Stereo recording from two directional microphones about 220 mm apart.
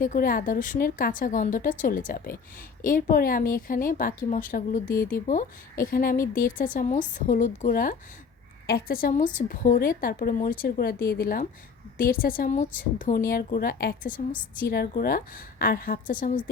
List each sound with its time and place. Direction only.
0.0 s a woman's voice: 40° left (ahead or behind)
4.9 s speech: 10° left (ahead or behind)
5.3 s a woman's voice: 35° left (ahead or behind)